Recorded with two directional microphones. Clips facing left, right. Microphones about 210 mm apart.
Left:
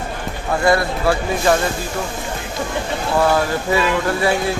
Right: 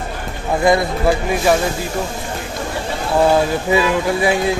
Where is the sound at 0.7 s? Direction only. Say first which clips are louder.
Right 2 dB; 15° right (ahead or behind).